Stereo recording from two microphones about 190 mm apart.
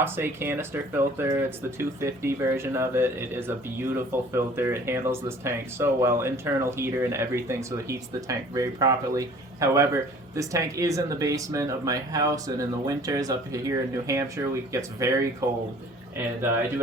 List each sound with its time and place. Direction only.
0.0 s speech: 10° right (ahead or behind)
16.1 s speech: 10° right (ahead or behind)